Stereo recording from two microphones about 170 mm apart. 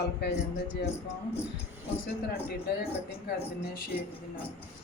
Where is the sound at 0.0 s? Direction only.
80° left.